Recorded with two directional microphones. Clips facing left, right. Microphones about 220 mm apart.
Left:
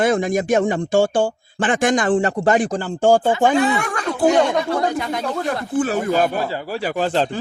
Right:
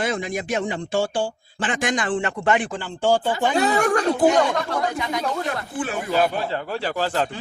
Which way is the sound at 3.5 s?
40° right (ahead or behind).